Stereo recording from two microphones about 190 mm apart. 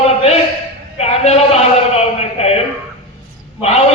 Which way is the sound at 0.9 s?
35° left (ahead or behind).